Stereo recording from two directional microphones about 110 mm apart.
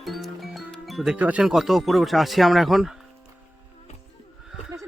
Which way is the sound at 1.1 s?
10° right (ahead or behind).